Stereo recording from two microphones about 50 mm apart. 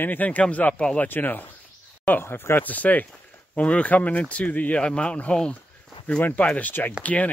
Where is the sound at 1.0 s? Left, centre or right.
Left.